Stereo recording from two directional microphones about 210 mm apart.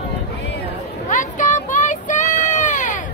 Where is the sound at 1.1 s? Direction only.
35° left (ahead or behind).